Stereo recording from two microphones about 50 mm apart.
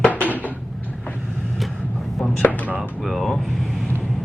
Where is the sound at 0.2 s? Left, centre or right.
Left.